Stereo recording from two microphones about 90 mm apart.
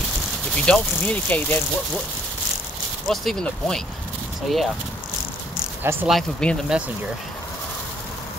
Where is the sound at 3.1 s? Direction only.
5° left (ahead or behind).